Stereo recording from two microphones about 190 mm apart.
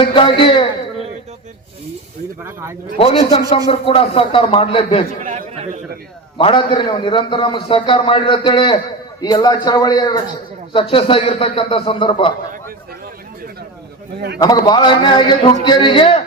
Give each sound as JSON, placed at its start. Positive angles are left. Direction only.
{"t": 0.0, "sound": "a man's voice", "side_deg": 25}
{"t": 2.4, "sound": "speech", "side_deg": -15}
{"t": 3.0, "sound": "a man's voice", "side_deg": 30}
{"t": 5.2, "sound": "a man's voice", "side_deg": -40}
{"t": 6.3, "sound": "a man's voice", "side_deg": 25}
{"t": 14.3, "sound": "a man's voice", "side_deg": 20}